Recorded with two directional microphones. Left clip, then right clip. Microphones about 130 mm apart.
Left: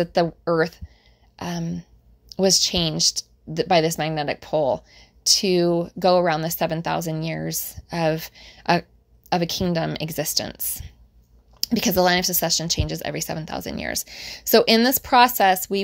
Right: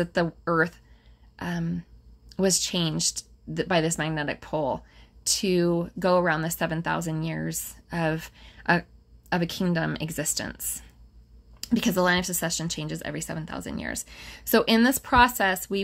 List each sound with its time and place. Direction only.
0.0 s a woman's voice: 30° left (ahead or behind)